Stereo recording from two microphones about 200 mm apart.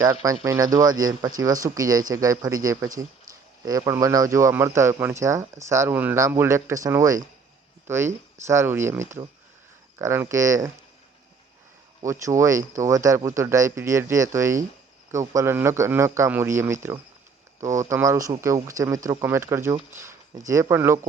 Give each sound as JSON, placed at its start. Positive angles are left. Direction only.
{"t": 0.0, "sound": "speech", "side_deg": -15}
{"t": 12.2, "sound": "speech", "side_deg": -15}